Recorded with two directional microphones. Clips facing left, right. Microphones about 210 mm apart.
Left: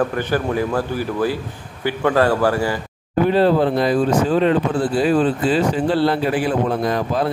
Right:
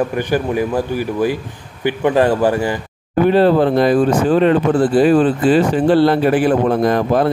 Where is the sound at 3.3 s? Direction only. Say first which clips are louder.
Right 3 dB; 60° right (ahead or behind).